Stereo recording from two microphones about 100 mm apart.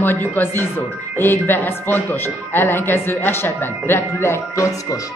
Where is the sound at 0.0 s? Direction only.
20° left (ahead or behind).